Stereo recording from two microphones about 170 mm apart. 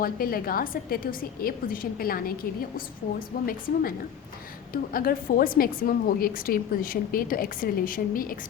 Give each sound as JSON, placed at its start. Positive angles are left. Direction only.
{"t": 0.0, "sound": "a woman's voice", "side_deg": 60}
{"t": 4.7, "sound": "a woman's voice", "side_deg": 60}